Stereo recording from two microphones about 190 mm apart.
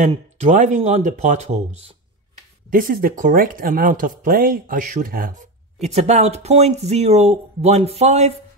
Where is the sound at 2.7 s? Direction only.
50° right (ahead or behind).